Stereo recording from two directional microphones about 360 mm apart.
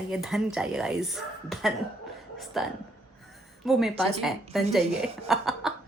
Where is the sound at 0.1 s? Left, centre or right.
Centre.